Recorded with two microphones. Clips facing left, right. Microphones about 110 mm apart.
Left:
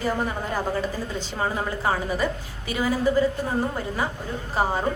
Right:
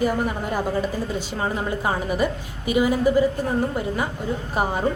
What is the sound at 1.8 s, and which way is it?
A woman's voice, 15° right (ahead or behind).